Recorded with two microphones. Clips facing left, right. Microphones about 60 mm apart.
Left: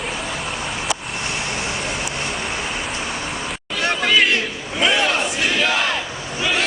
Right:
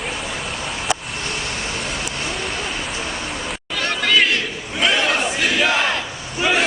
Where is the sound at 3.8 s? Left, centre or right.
Centre.